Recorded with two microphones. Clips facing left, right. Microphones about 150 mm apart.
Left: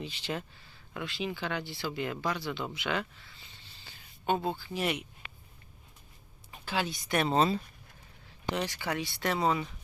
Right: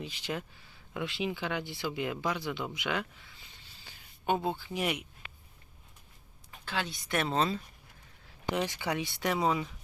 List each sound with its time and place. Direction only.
0.0 s speech: 10° right (ahead or behind)
2.7 s a sound: 10° right (ahead or behind)
4.7 s speech: 10° right (ahead or behind)
6.7 s speech: 5° left (ahead or behind)
8.5 s speech: 20° right (ahead or behind); by 9.7 s 5° right (ahead or behind)